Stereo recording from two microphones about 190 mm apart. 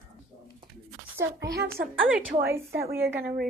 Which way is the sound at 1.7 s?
10° right (ahead or behind).